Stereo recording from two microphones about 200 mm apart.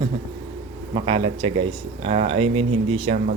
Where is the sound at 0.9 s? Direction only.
30° right (ahead or behind).